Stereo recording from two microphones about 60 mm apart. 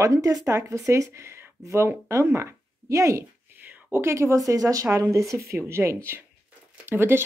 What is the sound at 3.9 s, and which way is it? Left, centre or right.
Speech, right.